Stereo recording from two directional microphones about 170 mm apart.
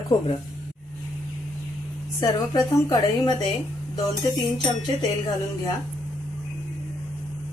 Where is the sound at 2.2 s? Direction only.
20° left (ahead or behind).